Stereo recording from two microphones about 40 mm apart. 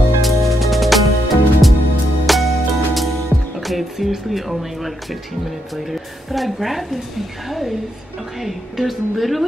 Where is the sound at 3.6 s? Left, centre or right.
Centre.